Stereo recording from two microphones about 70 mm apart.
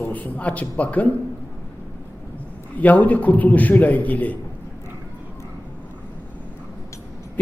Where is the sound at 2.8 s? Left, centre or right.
Left.